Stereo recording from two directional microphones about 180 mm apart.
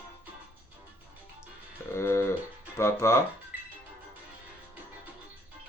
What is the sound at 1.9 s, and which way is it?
Music, 15° left (ahead or behind).